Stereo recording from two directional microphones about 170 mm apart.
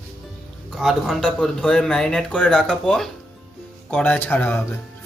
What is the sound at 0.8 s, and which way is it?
A man's voice, centre (ahead or behind).